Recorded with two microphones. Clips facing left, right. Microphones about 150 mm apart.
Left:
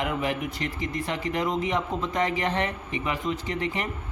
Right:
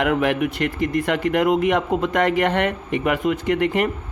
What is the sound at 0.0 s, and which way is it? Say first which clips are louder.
Speech: right 8 dB; 75° right (ahead or behind).